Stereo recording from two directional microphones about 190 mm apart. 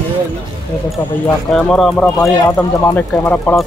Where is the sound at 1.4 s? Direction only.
Centre (ahead or behind).